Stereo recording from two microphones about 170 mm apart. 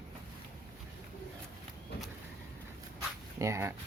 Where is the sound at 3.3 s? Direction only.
15° right (ahead or behind).